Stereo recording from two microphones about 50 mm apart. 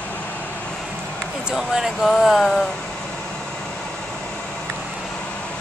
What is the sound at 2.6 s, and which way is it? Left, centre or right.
Vehicle, centre.